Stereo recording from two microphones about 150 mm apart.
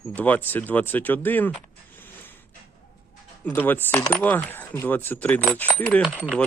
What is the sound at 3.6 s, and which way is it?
Speech, 10° left (ahead or behind).